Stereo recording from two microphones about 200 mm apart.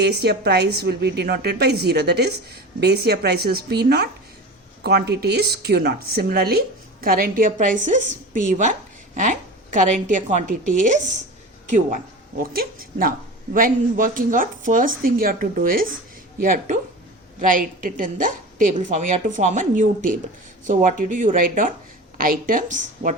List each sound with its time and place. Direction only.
0.0 s a woman's voice: 55° right (ahead or behind); by 11.9 s 35° right (ahead or behind)
12.4 s a woman's voice: 45° right (ahead or behind)